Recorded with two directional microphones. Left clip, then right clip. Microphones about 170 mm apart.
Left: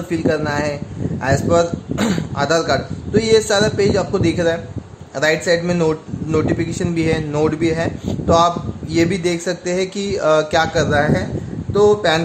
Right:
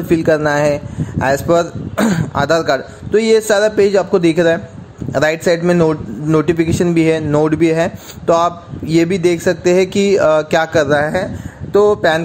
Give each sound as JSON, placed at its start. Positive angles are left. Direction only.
{"t": 0.1, "sound": "a man's voice", "side_deg": -45}